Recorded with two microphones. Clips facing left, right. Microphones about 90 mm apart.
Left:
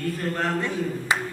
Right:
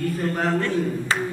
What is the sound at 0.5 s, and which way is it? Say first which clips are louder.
Speech: right 4 dB; 15° left (ahead or behind).